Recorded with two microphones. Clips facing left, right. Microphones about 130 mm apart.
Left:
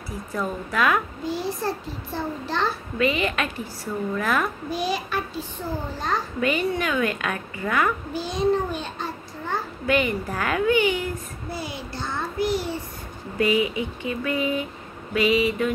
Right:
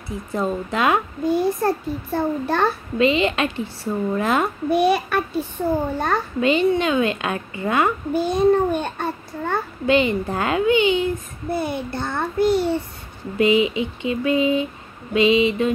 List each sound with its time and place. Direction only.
0.3 s a woman's voice: 25° right (ahead or behind)
1.2 s a child's voice: 55° right (ahead or behind)
3.0 s a woman's voice: 25° right (ahead or behind)
4.6 s a child's voice: 60° right (ahead or behind)
6.4 s a woman's voice: 25° right (ahead or behind)
8.1 s a child's voice: 55° right (ahead or behind)
9.8 s a woman's voice: 25° right (ahead or behind)
11.5 s a child's voice: 55° right (ahead or behind)
13.4 s a woman's voice: 20° right (ahead or behind)